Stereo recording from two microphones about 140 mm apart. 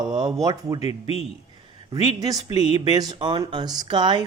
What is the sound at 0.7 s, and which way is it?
Speech, 45° left (ahead or behind).